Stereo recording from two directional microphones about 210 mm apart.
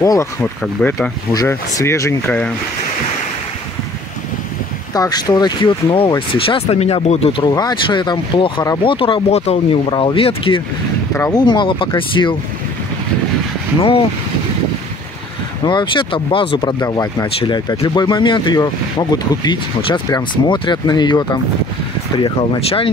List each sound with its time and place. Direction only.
0.0 s speech: 15° left (ahead or behind)
4.9 s speech: 20° left (ahead or behind)
13.7 s speech: 25° left (ahead or behind)
15.6 s speech: 20° left (ahead or behind)